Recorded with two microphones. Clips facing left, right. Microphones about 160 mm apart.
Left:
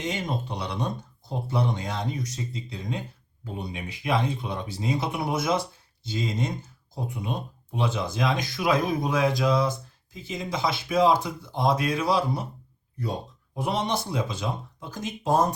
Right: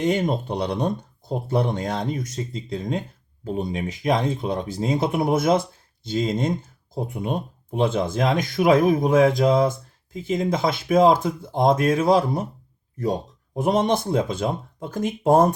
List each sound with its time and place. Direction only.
0.0 s speech: 55° right (ahead or behind)
13.6 s speech: 50° right (ahead or behind)